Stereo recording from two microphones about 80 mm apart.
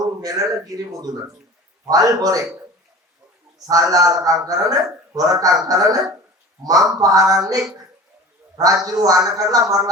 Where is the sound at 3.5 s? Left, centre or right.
Right.